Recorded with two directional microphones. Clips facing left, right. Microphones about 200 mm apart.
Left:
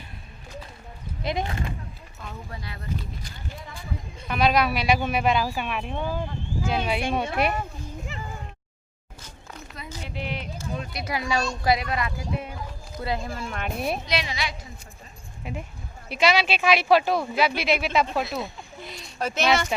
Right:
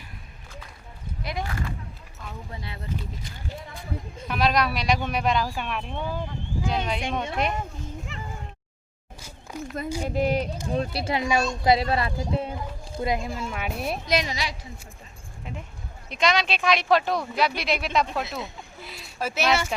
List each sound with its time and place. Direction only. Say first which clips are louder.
1.2 s speech: left 3 dB; 25° left (ahead or behind)
2.5 s speech: right 1 dB; 25° right (ahead or behind)
4.3 s speech: left 2 dB; centre (ahead or behind)
8.1 s a sound: left 1 dB; centre (ahead or behind)
9.5 s a sound: right 8 dB; 10° right (ahead or behind)
10.0 s speech: right 9 dB; 45° right (ahead or behind); by 11.4 s 15° right (ahead or behind)
11.6 s speech: right 4 dB; 25° right (ahead or behind)
13.1 s speech: right 1 dB; 15° right (ahead or behind)
14.1 s speech: right 3 dB; 45° right (ahead or behind)
15.5 s speech: left 4 dB; 10° left (ahead or behind); by 19.7 s 5° right (ahead or behind)